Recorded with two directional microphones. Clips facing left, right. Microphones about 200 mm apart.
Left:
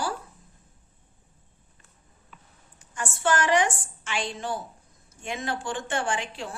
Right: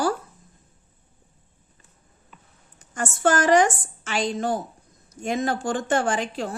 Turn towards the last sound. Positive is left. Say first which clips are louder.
# right 5 dB
turn(degrees=-40)  # may be behind; listen again after turning